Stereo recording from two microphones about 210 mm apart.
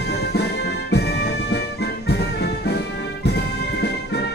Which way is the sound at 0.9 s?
50° left (ahead or behind).